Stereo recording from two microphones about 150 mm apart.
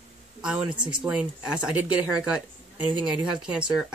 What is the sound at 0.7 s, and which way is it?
Speech, 30° right (ahead or behind).